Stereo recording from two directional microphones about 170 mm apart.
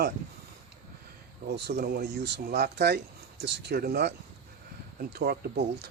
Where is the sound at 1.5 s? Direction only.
70° right (ahead or behind).